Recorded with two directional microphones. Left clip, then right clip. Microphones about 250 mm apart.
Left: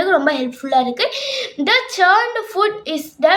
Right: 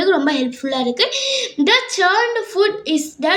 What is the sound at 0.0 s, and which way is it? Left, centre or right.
A woman's voice, centre.